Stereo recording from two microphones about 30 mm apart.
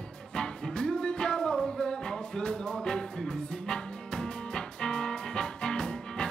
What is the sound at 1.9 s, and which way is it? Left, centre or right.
Music, left.